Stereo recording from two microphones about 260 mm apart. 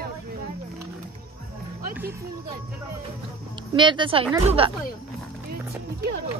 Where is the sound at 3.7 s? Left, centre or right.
Centre.